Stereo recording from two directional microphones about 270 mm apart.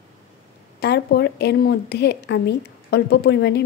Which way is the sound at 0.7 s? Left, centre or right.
Left.